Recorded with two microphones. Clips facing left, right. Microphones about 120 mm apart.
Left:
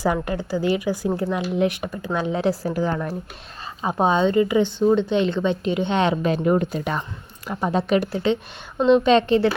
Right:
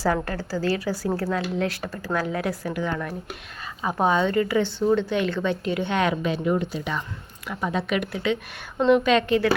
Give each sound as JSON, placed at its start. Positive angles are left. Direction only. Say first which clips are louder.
{"t": 0.0, "sound": "a woman's voice", "louder": "left 2 dB", "side_deg": 15}
{"t": 6.2, "sound": "speech", "louder": "left 4 dB", "side_deg": 45}
{"t": 7.4, "sound": "a woman's voice", "louder": "left 4 dB", "side_deg": 35}